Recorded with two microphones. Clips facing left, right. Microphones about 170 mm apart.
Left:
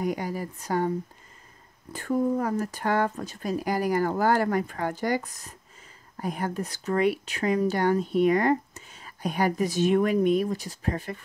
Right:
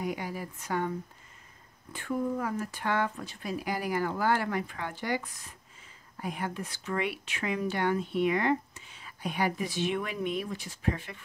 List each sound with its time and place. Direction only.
0.0 s speech: 40° left (ahead or behind)